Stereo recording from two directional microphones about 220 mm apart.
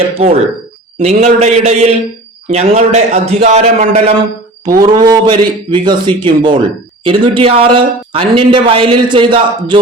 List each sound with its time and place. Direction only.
0.1 s speech: 25° right (ahead or behind)
4.8 s speech: 20° right (ahead or behind)